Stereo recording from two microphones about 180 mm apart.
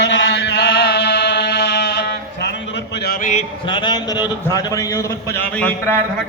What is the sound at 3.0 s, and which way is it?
Speech, 50° left (ahead or behind).